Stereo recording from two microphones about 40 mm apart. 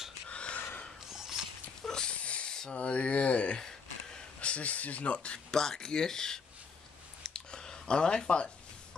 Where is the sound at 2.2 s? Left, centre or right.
Left.